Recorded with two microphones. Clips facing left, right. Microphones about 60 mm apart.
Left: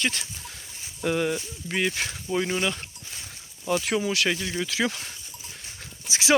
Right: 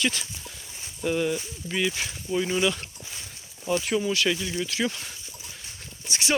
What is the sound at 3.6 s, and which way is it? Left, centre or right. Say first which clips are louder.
Speech: even; left.